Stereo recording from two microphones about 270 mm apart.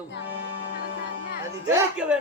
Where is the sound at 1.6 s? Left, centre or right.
Centre.